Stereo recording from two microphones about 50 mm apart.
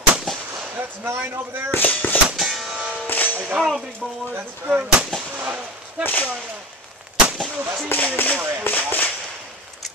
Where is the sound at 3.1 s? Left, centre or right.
Left.